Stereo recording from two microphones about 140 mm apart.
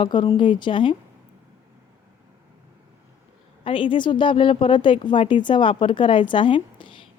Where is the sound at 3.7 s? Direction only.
35° left (ahead or behind).